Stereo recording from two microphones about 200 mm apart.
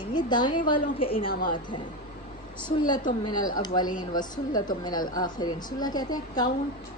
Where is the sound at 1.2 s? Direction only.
45° left (ahead or behind).